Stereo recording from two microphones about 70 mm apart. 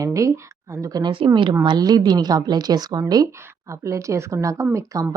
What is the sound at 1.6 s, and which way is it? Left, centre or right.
A woman's voice, right.